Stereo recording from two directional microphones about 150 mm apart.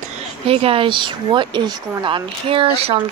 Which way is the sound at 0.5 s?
40° right (ahead or behind).